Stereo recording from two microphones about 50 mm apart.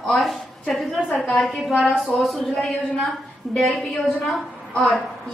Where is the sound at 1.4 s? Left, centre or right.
Centre.